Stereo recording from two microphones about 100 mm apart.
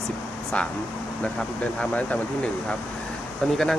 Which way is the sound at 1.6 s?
15° left (ahead or behind).